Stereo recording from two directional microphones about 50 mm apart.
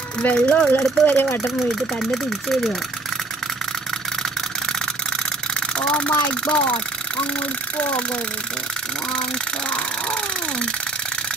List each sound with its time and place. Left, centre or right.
0.2 s speech: left
0.7 s speech: left
2.0 s speech: centre
5.8 s speech: left